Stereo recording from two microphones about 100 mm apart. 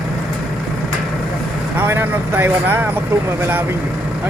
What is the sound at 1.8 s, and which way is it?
Speech, 20° right (ahead or behind).